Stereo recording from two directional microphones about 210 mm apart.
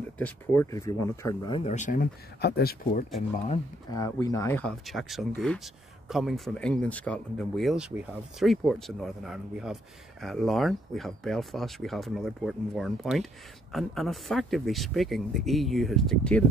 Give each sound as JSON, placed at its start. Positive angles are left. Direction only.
{"t": 0.2, "sound": "speech", "side_deg": 10}
{"t": 1.6, "sound": "speech", "side_deg": 35}
{"t": 3.2, "sound": "speech", "side_deg": 30}
{"t": 3.9, "sound": "speech", "side_deg": 15}